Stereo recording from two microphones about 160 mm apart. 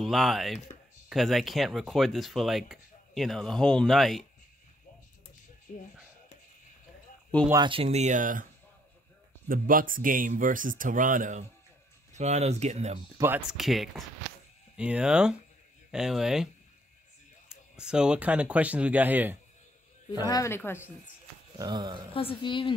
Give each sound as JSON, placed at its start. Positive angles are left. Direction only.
{"t": 0.0, "sound": "speech", "side_deg": 0}
{"t": 5.7, "sound": "speech", "side_deg": 50}
{"t": 7.5, "sound": "speech", "side_deg": -30}
{"t": 9.5, "sound": "speech", "side_deg": -60}
{"t": 13.5, "sound": "speech", "side_deg": 0}
{"t": 17.5, "sound": "speech", "side_deg": -5}
{"t": 20.2, "sound": "speech", "side_deg": 20}
{"t": 21.5, "sound": "speech", "side_deg": -25}
{"t": 22.1, "sound": "a woman's voice", "side_deg": 35}